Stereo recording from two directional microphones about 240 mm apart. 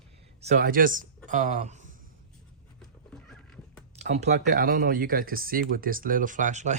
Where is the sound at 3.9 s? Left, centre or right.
Right.